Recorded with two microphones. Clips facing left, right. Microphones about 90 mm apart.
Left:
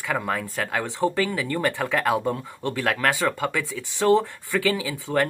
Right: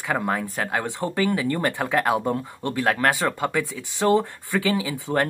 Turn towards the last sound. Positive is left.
turn(degrees=-25)  # may be behind; listen again after turning